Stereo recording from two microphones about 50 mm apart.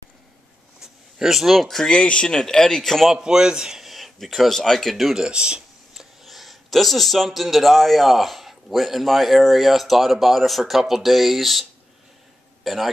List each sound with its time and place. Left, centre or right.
0.7 s speech: centre
2.0 s speech: centre
3.1 s speech: centre
5.1 s speech: centre
5.9 s speech: centre
12.6 s a man's voice: centre